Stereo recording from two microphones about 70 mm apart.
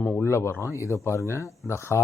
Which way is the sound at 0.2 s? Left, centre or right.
Left.